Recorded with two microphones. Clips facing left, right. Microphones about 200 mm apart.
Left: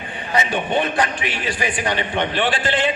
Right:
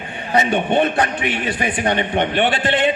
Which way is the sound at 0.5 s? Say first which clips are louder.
Right 3 dB; 60° right (ahead or behind).